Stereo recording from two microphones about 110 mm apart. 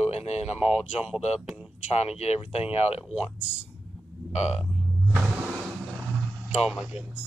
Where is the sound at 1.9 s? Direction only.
75° left (ahead or behind).